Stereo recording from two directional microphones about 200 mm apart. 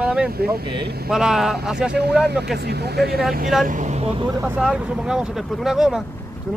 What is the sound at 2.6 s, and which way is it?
Speech, 55° right (ahead or behind).